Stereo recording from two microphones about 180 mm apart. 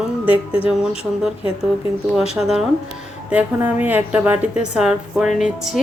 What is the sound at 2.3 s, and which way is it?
Speech, centre (ahead or behind).